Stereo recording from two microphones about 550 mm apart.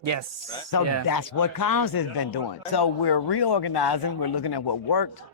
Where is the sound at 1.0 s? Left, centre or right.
Left.